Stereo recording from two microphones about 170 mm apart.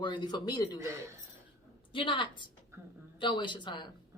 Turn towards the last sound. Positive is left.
turn(degrees=25)  # may be behind; listen again after turning